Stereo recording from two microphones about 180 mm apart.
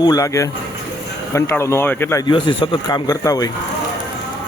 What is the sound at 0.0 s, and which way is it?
A man's voice, 20° left (ahead or behind).